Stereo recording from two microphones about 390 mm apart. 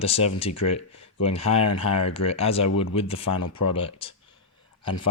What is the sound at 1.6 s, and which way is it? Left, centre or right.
Speech, left.